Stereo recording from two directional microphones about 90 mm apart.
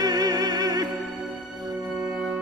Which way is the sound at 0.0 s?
45° right (ahead or behind).